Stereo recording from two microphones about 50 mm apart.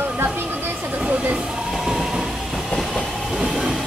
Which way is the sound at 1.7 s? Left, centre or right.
Centre.